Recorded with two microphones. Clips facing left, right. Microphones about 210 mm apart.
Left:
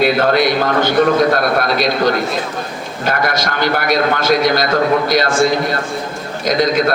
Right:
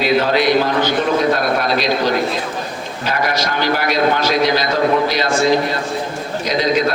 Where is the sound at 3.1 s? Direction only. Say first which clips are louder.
Left 1 dB; 50° left (ahead or behind).